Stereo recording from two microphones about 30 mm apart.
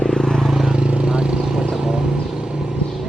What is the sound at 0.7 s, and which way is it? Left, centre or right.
Vehicle, right.